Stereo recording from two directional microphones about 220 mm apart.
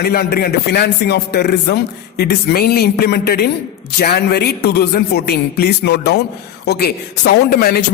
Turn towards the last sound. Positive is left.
turn(degrees=45)  # may be behind; listen again after turning